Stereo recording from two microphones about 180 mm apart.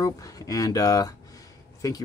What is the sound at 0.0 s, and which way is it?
Speech, 20° left (ahead or behind).